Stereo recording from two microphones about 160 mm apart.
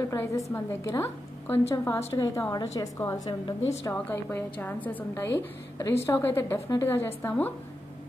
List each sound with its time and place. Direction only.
0.1 s a woman's voice: 20° left (ahead or behind)